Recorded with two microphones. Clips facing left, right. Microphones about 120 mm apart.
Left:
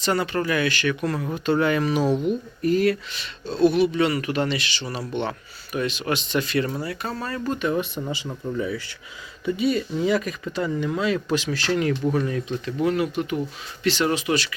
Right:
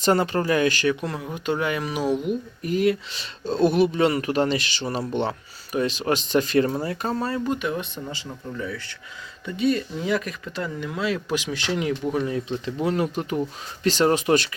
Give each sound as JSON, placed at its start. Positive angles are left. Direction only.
{"t": 0.0, "sound": "speech", "side_deg": -40}
{"t": 1.0, "sound": "speech", "side_deg": -15}
{"t": 3.1, "sound": "speech", "side_deg": -35}
{"t": 7.1, "sound": "speech", "side_deg": -25}
{"t": 7.4, "sound": "speech", "side_deg": -10}
{"t": 7.7, "sound": "speech", "side_deg": 10}
{"t": 11.3, "sound": "speech", "side_deg": -20}